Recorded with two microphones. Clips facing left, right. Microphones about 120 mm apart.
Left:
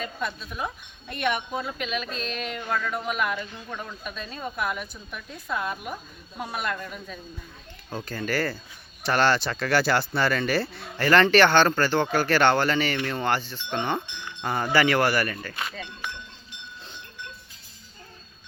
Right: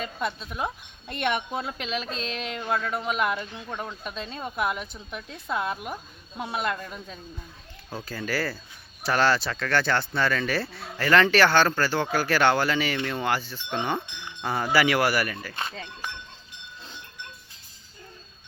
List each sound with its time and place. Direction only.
0.0 s speech: 25° right (ahead or behind)
7.9 s speech: 5° right (ahead or behind)
15.5 s speech: 30° right (ahead or behind)